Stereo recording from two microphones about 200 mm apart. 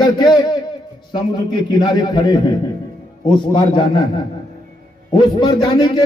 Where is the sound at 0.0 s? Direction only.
20° left (ahead or behind).